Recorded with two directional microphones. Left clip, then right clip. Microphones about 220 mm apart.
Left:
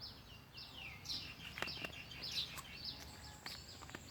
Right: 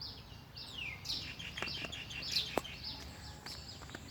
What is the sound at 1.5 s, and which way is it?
Bird, 25° left (ahead or behind).